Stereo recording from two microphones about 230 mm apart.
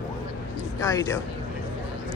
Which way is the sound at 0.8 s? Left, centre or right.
Centre.